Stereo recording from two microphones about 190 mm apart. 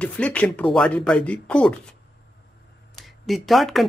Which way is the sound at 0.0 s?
5° left (ahead or behind).